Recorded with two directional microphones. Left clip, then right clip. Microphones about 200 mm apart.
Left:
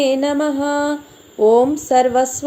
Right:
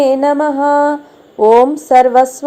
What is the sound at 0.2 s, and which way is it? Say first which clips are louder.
Mantra: right 6 dB; 15° left (ahead or behind).